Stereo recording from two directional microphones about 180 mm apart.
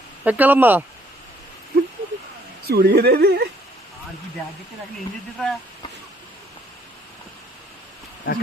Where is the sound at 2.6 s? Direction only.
60° right (ahead or behind).